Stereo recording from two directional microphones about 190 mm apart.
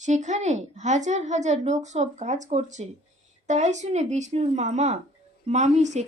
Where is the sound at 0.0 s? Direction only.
40° right (ahead or behind).